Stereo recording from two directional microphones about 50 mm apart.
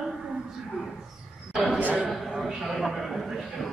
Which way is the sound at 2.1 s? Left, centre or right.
Centre.